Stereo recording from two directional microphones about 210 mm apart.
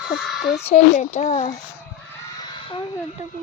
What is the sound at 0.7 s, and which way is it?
Speech, 30° left (ahead or behind).